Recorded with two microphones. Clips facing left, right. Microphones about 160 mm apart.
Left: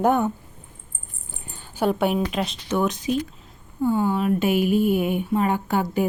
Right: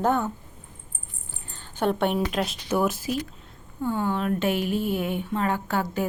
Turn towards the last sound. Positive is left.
turn(degrees=15)  # may be behind; listen again after turning